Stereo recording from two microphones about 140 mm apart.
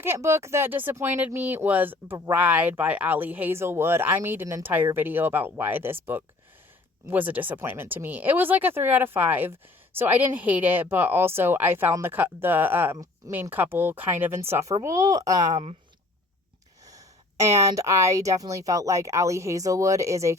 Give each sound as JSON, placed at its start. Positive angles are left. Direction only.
{"t": 0.0, "sound": "speech", "side_deg": -20}
{"t": 16.8, "sound": "a woman's voice", "side_deg": -25}